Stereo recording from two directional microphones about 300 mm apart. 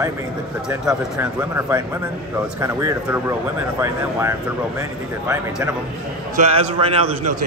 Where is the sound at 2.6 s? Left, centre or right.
Centre.